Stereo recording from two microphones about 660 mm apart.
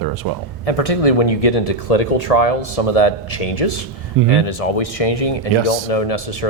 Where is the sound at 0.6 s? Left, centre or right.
Left.